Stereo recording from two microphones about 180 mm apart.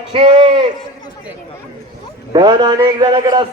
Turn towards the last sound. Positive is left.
turn(degrees=-20)  # may be behind; listen again after turning